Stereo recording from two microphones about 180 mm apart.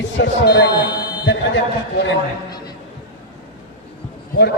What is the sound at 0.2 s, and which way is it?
A man's voice, 70° left (ahead or behind).